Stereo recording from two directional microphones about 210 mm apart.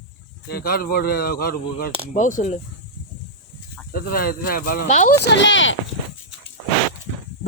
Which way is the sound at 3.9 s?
45° left (ahead or behind).